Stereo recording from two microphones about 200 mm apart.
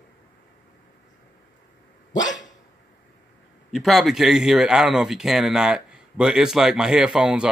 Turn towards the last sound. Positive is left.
turn(degrees=-5)  # may be behind; listen again after turning